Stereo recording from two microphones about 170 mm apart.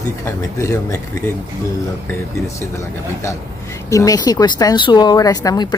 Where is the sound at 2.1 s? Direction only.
15° left (ahead or behind).